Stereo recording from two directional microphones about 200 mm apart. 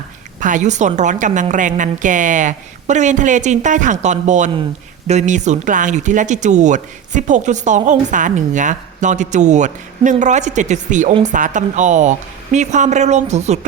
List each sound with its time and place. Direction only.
0.3 s speech: 40° right (ahead or behind)